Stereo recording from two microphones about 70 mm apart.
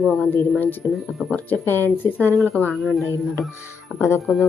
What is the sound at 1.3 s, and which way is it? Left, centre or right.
Speech, left.